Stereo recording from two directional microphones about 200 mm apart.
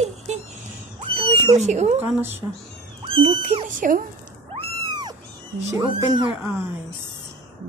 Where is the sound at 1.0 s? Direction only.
25° right (ahead or behind).